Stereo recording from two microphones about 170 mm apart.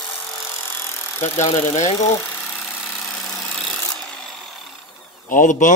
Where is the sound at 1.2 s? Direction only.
15° left (ahead or behind).